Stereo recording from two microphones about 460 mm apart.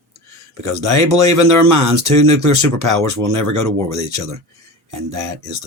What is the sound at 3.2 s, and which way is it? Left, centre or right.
Speech, right.